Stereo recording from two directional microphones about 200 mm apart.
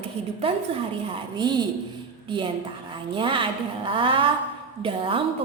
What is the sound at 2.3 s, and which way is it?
A woman's voice, 25° right (ahead or behind).